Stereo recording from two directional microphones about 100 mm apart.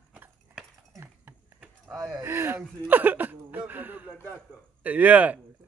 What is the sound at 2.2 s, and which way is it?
Speech, 25° right (ahead or behind).